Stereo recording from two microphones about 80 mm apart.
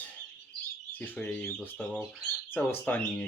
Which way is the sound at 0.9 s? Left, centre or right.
Left.